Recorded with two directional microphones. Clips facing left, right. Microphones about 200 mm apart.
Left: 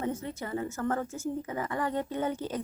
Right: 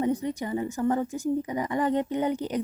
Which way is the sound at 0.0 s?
15° right (ahead or behind).